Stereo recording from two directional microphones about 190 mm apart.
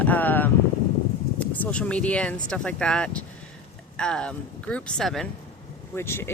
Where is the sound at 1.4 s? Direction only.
5° left (ahead or behind).